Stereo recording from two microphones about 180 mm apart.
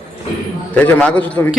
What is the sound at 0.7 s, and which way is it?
Speech, 10° left (ahead or behind).